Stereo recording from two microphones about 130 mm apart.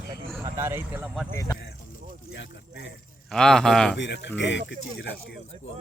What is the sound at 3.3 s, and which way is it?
Speech, 5° left (ahead or behind).